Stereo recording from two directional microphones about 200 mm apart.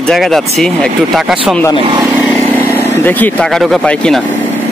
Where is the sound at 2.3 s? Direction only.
15° left (ahead or behind).